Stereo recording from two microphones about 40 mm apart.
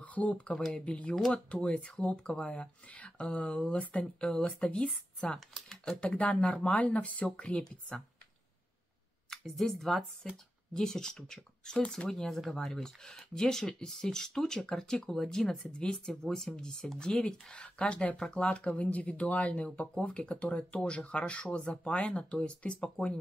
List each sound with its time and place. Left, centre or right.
0.0 s speech: left
4.2 s speech: left
4.5 s speech: left
4.7 s speech: centre
5.9 s speech: left
9.3 s speech: centre
15.6 s speech: left
16.1 s speech: centre; by 19.9 s left
19.9 s speech: left